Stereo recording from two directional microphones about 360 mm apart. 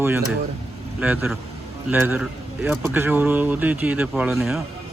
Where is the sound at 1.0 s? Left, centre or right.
Centre.